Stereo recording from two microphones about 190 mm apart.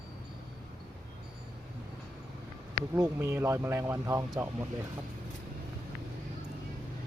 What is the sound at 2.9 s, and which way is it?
Speech, 15° right (ahead or behind).